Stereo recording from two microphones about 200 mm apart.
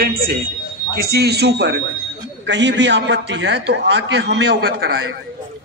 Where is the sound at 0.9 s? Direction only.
50° right (ahead or behind).